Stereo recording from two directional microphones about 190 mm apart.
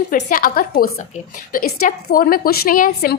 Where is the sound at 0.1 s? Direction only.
45° left (ahead or behind).